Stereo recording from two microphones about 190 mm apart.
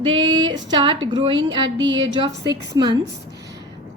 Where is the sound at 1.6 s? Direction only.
70° right (ahead or behind).